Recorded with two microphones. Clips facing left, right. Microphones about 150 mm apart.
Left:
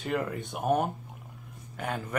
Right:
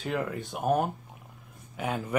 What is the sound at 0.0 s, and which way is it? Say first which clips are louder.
Speech: even; centre (ahead or behind).